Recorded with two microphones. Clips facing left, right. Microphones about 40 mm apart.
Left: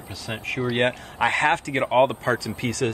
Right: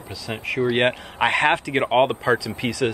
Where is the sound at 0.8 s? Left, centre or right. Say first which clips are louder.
Right 2 dB; right.